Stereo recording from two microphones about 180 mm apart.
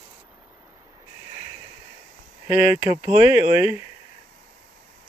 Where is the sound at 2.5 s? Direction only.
40° left (ahead or behind).